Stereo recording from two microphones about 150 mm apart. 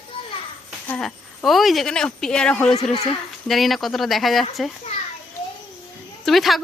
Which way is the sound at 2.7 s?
45° left (ahead or behind).